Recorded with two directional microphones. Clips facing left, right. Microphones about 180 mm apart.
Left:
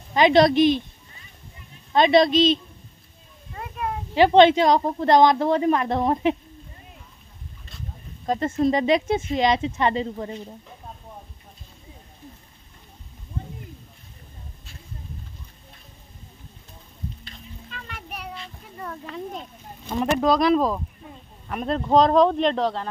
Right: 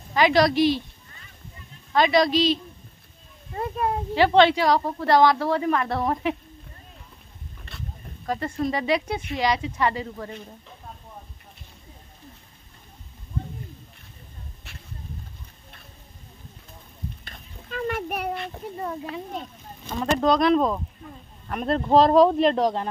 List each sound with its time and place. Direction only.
0.1 s a woman's voice: 20° left (ahead or behind)
1.9 s a woman's voice: 25° left (ahead or behind)
3.5 s a sound: 35° right (ahead or behind)
4.1 s a woman's voice: 20° left (ahead or behind)
7.7 s boat: 65° right (ahead or behind)
8.3 s a woman's voice: 25° left (ahead or behind)
17.2 s a sound: 50° right (ahead or behind)
20.2 s speech: centre (ahead or behind); by 22.8 s 15° right (ahead or behind)